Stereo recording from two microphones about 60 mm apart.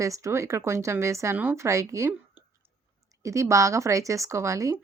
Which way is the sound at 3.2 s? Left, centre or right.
Right.